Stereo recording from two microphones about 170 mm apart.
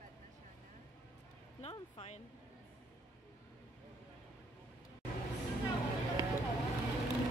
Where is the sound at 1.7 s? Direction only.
35° left (ahead or behind).